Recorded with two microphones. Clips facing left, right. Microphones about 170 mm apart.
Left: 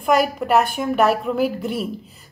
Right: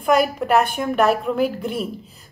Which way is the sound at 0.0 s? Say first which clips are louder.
Even; centre (ahead or behind).